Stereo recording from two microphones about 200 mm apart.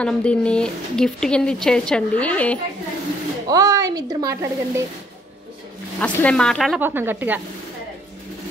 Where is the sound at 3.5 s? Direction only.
15° right (ahead or behind).